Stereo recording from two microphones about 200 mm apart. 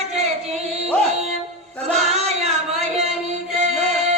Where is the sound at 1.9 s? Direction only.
30° right (ahead or behind).